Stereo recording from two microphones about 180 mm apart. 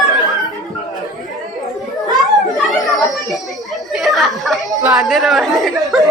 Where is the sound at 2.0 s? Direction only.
20° right (ahead or behind).